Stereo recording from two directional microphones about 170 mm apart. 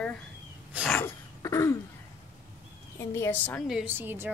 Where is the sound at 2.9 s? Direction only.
15° left (ahead or behind).